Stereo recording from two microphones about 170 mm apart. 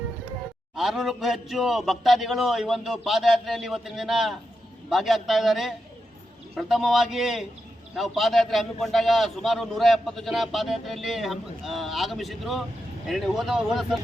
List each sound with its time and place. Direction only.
0.8 s a man's voice: centre (ahead or behind)